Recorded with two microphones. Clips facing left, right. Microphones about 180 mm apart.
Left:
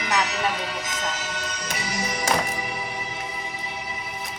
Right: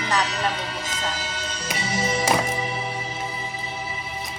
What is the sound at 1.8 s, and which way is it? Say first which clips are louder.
Music: right 6 dB; 25° right (ahead or behind).